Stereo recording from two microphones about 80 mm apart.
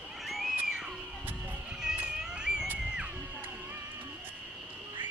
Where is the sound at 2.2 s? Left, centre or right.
Centre.